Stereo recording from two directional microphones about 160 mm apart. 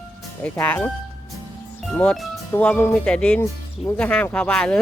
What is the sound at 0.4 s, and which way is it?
Speech, 10° left (ahead or behind).